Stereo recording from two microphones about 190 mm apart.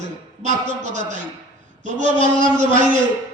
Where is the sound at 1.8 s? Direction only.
40° right (ahead or behind).